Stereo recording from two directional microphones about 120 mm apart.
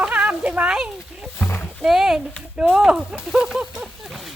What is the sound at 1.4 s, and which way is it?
Speech, 20° left (ahead or behind).